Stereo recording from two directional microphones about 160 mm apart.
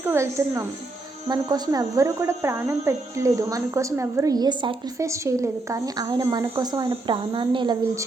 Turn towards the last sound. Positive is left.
turn(degrees=-30)  # may be behind; listen again after turning